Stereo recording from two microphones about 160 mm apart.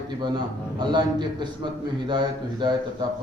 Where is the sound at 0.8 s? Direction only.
25° right (ahead or behind).